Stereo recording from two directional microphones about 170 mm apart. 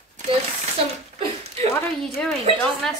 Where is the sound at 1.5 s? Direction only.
35° right (ahead or behind).